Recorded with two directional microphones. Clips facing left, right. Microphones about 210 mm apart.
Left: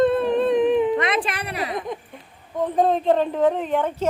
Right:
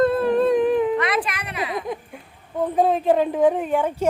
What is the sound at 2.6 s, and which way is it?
Speech, 5° right (ahead or behind).